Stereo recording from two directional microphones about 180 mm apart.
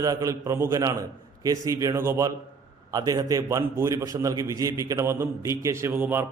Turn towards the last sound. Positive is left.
turn(degrees=-10)  # may be behind; listen again after turning